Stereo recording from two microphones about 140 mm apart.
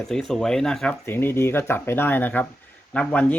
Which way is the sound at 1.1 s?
15° left (ahead or behind).